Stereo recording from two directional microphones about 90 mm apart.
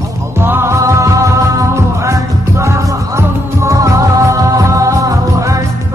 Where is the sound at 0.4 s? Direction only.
25° right (ahead or behind).